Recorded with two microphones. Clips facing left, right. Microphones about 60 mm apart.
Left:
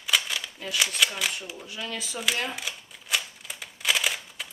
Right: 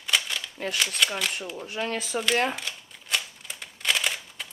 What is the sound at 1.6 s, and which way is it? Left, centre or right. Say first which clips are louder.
Speech: right 7 dB; right.